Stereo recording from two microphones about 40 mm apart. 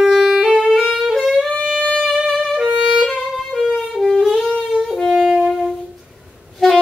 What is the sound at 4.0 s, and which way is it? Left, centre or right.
Wind instrument, centre.